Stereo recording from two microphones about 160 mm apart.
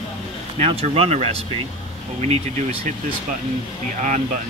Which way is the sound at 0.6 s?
40° right (ahead or behind).